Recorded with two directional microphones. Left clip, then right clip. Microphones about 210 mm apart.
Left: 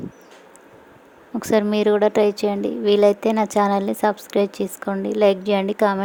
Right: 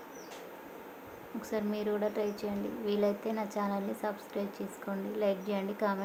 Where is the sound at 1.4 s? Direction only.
45° left (ahead or behind).